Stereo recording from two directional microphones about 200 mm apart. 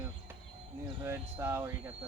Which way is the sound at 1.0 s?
10° right (ahead or behind).